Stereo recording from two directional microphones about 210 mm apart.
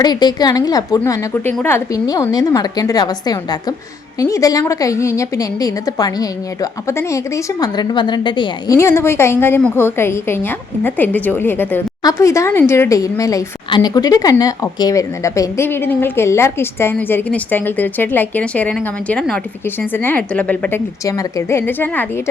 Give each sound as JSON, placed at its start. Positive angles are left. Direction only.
{"t": 0.0, "sound": "a woman's voice", "side_deg": 20}